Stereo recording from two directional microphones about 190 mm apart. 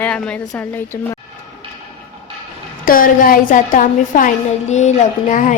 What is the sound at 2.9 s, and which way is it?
A woman's voice, 45° left (ahead or behind).